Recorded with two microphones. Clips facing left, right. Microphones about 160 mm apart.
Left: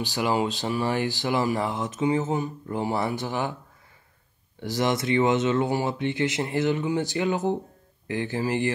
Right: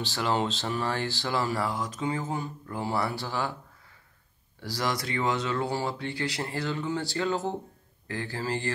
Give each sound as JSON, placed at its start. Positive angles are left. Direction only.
{"t": 0.0, "sound": "speech", "side_deg": 15}
{"t": 4.6, "sound": "speech", "side_deg": 20}